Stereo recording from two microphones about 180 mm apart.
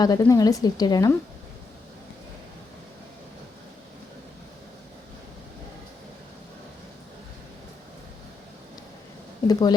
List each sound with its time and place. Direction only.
0.0 s speech: 20° left (ahead or behind)
9.5 s speech: 20° left (ahead or behind)